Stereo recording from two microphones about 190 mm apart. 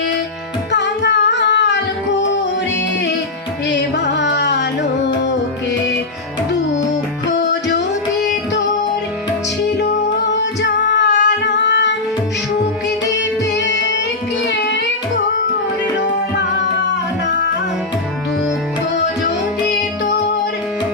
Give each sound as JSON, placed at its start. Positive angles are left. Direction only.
{"t": 0.7, "sound": "music", "side_deg": 65}
{"t": 3.7, "sound": "carnatic music", "side_deg": 65}
{"t": 7.3, "sound": "music", "side_deg": 70}
{"t": 9.6, "sound": "music", "side_deg": 65}
{"t": 13.1, "sound": "music", "side_deg": 70}